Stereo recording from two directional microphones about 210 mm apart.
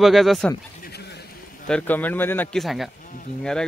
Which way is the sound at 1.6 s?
5° left (ahead or behind).